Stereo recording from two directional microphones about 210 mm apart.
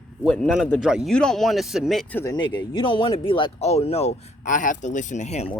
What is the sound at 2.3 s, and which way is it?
Speech, 20° left (ahead or behind).